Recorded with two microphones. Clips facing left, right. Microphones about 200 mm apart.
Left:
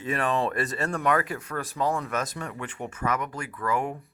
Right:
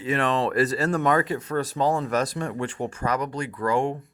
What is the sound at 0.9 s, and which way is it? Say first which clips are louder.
Speech: right 2 dB; 30° right (ahead or behind).